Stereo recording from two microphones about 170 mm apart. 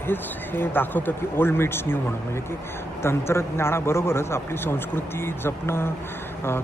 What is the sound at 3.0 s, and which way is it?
A man's voice, 15° left (ahead or behind).